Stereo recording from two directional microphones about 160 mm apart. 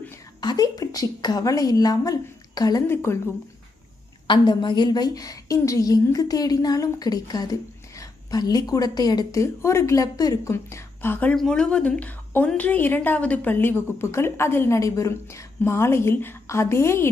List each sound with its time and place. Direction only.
0.4 s a woman's voice: 25° left (ahead or behind)
4.3 s a woman's voice: 30° left (ahead or behind)